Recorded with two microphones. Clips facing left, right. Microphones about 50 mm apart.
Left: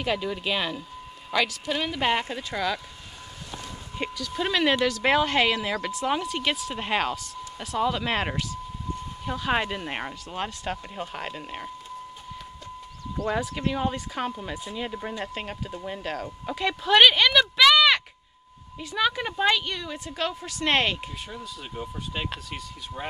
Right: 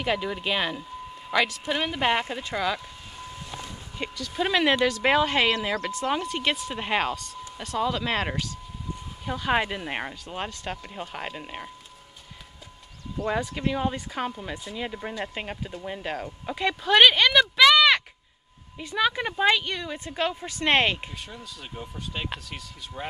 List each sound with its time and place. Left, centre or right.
0.0 s speech: centre
4.2 s speech: centre
4.7 s speech: right
5.0 s speech: centre
13.3 s speech: centre
14.9 s speech: centre
21.3 s speech: centre